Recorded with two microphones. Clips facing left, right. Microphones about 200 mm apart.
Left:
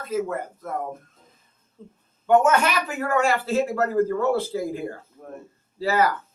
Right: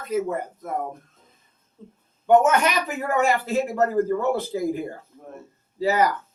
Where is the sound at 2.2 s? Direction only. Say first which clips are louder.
Right 1 dB; 15° right (ahead or behind).